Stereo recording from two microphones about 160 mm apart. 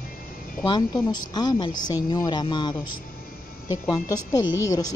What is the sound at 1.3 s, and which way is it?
A woman's voice, 25° left (ahead or behind).